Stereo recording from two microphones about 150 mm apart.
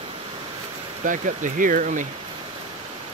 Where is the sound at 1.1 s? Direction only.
60° right (ahead or behind).